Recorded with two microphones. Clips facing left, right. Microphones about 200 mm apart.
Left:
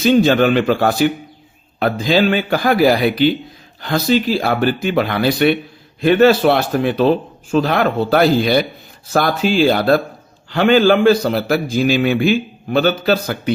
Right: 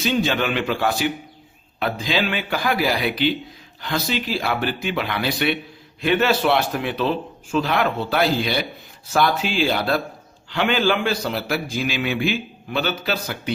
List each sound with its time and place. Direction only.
0.0 s a man's voice: 45° left (ahead or behind)